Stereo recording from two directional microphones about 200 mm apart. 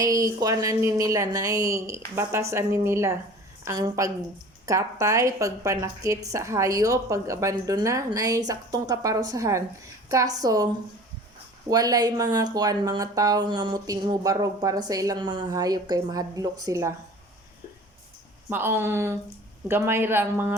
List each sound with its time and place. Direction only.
0.0 s a woman's voice: 20° right (ahead or behind)
11.7 s speech: 20° right (ahead or behind)
18.4 s a woman's voice: 10° right (ahead or behind)